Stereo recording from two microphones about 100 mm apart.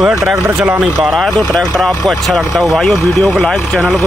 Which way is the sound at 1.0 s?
Centre (ahead or behind).